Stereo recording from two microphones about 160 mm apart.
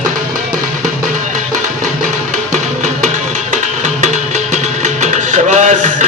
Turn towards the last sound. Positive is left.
turn(degrees=-50)  # may be behind; listen again after turning